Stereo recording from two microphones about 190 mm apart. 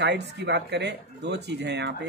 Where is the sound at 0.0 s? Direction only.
65° right (ahead or behind).